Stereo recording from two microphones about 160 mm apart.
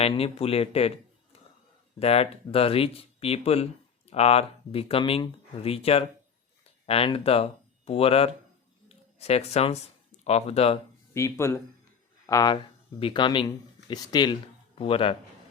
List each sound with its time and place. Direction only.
0.0 s a man's voice: 40° left (ahead or behind)
11.1 s speech: 15° left (ahead or behind); by 15.1 s 35° left (ahead or behind)